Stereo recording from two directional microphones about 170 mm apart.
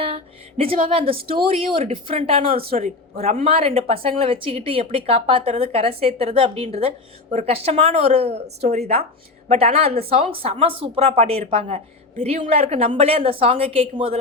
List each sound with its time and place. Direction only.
0.0 s speech: 35° right (ahead or behind)